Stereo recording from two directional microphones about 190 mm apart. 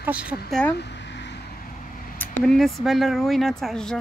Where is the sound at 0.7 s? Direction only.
65° left (ahead or behind); by 2.1 s 50° left (ahead or behind).